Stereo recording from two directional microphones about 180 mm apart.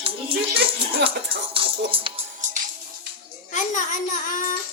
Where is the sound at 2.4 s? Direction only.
45° right (ahead or behind).